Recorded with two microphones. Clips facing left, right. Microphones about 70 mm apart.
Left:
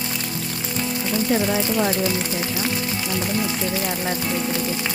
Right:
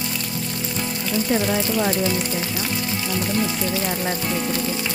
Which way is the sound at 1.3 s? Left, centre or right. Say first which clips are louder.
Even; centre.